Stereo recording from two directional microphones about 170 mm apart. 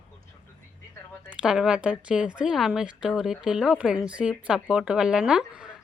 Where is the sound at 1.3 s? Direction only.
5° right (ahead or behind).